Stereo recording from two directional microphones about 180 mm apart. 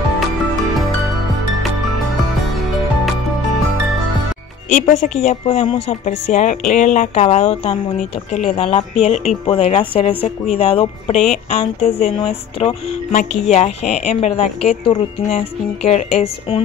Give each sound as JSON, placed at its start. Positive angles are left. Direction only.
{"t": 4.7, "sound": "speech", "side_deg": 40}